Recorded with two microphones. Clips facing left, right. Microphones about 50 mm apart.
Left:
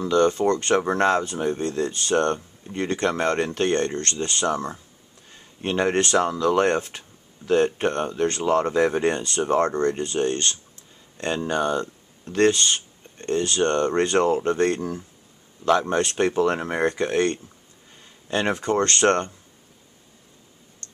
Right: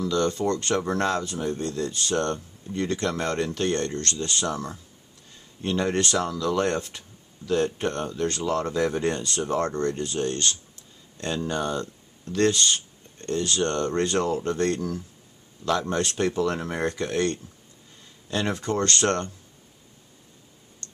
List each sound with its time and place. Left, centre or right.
0.0 s speech: left